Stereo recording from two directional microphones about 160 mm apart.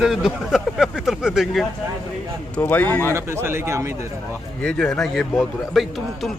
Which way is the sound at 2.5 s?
10° left (ahead or behind).